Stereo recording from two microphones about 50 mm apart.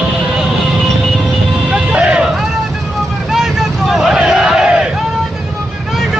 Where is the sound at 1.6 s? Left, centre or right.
Centre.